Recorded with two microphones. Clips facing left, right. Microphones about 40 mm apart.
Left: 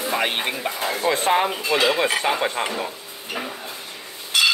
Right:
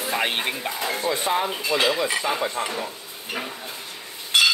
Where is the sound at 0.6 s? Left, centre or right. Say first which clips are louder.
Left 2 dB; left.